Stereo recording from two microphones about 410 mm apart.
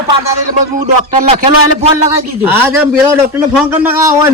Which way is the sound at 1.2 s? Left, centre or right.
Centre.